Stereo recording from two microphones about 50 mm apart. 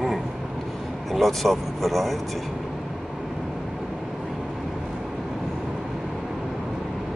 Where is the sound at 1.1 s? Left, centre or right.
Centre.